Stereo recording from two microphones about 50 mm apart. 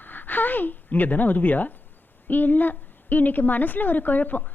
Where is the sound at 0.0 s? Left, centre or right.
Left.